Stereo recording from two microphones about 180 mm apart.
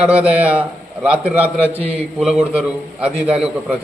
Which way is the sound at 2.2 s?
5° right (ahead or behind).